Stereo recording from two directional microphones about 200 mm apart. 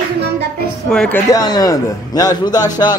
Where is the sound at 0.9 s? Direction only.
5° left (ahead or behind).